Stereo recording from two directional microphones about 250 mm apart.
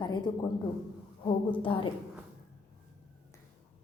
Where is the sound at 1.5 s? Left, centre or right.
Centre.